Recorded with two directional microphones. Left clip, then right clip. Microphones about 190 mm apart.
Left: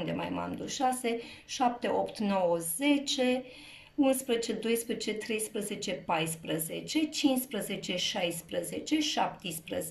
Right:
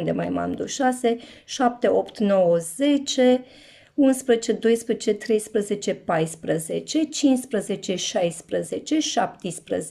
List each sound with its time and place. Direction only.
0.0 s speech: 50° right (ahead or behind)